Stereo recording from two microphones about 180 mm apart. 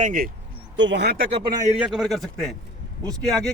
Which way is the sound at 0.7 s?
85° right.